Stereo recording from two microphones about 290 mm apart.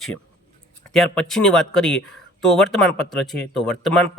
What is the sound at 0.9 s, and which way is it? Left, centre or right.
Speech, centre.